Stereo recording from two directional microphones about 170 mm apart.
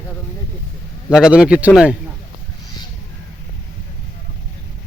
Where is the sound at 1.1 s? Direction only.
5° right (ahead or behind).